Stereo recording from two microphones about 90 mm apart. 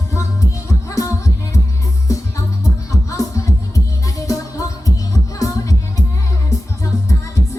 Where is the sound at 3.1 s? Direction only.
35° left (ahead or behind).